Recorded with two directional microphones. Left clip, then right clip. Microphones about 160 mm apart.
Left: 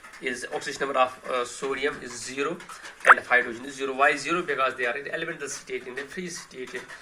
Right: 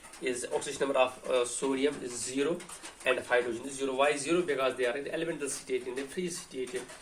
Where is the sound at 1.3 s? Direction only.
25° right (ahead or behind).